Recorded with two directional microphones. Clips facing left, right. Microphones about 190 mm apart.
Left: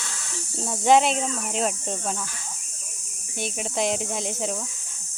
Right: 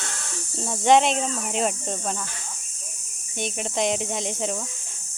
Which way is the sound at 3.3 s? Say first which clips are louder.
Right 1 dB; 5° left (ahead or behind).